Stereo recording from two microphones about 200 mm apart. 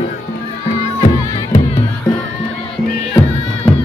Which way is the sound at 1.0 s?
30° left (ahead or behind).